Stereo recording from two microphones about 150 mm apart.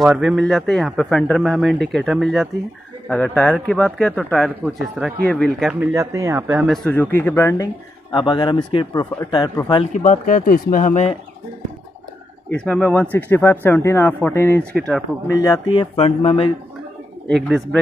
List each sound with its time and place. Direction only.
0.0 s speech: 5° right (ahead or behind)
3.1 s speech: 10° left (ahead or behind)
5.9 s speech: 20° right (ahead or behind)
6.7 s speech: 5° left (ahead or behind); by 9.5 s 25° left (ahead or behind)
9.9 s speech: 55° left (ahead or behind)
12.4 s speech: 10° left (ahead or behind)
15.2 s speech: 20° left (ahead or behind)
15.7 s speech: 40° left (ahead or behind)
17.3 s speech: centre (ahead or behind)